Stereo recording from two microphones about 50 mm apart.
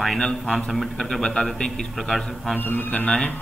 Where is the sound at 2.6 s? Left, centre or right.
Left.